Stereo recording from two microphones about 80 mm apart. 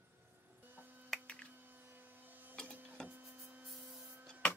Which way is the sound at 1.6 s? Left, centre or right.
Right.